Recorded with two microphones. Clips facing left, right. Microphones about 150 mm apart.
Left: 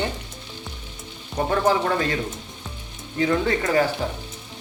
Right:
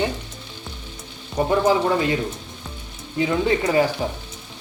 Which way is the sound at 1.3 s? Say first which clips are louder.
Right 2 dB; 15° right (ahead or behind).